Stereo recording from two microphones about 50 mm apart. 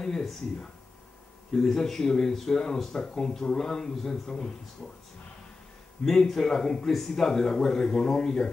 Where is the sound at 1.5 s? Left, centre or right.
Centre.